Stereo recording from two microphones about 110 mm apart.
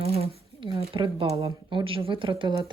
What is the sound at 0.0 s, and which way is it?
Speech, 65° right (ahead or behind).